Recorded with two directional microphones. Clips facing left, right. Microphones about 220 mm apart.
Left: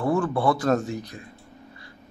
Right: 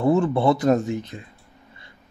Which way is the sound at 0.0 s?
25° right (ahead or behind).